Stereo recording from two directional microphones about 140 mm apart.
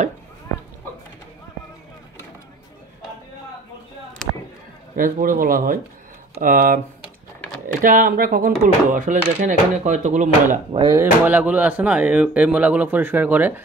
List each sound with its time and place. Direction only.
4.9 s speech: 85° right; by 10.6 s 60° right (ahead or behind)
10.9 s speech: 15° right (ahead or behind)